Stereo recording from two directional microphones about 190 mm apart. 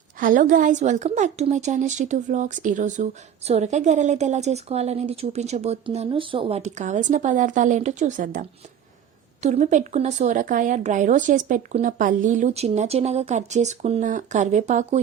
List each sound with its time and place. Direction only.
0.2 s a woman's voice: 45° right (ahead or behind)